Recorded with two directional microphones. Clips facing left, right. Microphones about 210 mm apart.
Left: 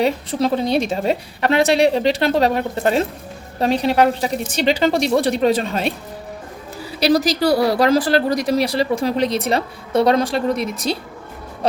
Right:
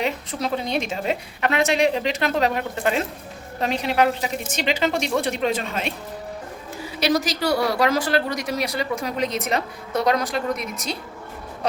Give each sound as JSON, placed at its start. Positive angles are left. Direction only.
{"t": 0.0, "sound": "a woman's voice", "side_deg": 30}
{"t": 7.0, "sound": "a woman's voice", "side_deg": 35}